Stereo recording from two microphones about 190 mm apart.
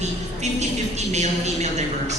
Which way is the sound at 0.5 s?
35° right (ahead or behind).